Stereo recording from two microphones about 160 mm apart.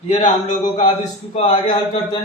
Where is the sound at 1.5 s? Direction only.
30° left (ahead or behind).